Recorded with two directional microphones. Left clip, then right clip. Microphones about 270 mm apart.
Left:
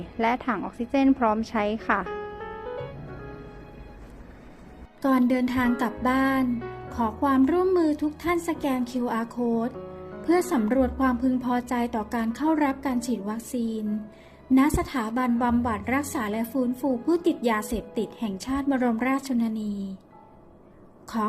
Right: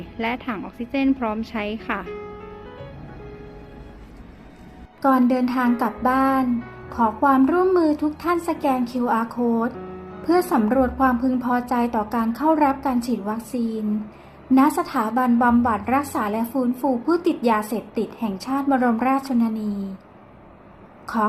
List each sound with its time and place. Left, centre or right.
0.2 s a woman's voice: centre
5.0 s a woman's voice: left